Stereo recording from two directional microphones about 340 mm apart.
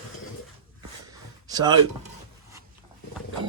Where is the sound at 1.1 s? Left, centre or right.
Centre.